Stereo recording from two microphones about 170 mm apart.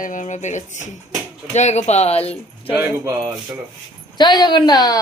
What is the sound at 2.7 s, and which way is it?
Speech, 15° right (ahead or behind).